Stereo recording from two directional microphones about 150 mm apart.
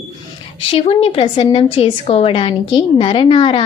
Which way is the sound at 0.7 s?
40° left (ahead or behind).